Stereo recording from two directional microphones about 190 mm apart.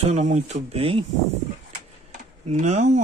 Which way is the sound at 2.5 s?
40° right (ahead or behind).